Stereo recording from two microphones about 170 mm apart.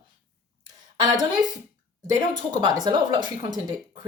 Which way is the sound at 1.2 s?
25° right (ahead or behind).